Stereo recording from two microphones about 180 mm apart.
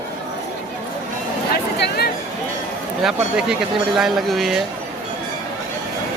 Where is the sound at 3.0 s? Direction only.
5° right (ahead or behind).